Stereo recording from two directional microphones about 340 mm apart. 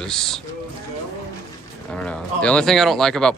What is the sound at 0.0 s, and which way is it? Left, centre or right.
Speech, centre.